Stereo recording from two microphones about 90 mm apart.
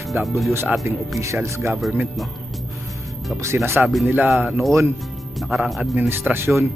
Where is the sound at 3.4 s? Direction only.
30° right (ahead or behind).